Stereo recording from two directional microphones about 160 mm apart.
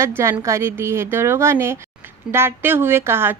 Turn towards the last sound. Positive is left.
turn(degrees=-15)  # may be behind; listen again after turning